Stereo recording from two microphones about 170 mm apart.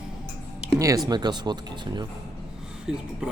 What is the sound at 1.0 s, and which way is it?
Speech, 25° right (ahead or behind).